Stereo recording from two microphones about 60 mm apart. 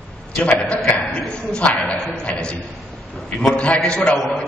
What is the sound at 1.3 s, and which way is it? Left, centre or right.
A man's voice, centre.